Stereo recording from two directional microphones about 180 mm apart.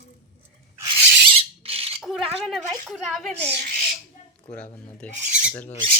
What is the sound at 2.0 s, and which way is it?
A woman's voice, centre (ahead or behind).